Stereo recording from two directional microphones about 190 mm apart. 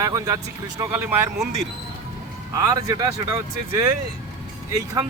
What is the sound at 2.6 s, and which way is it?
Speech, 20° right (ahead or behind).